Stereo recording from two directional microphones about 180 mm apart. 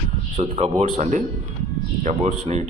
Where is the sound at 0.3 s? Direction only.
35° right (ahead or behind).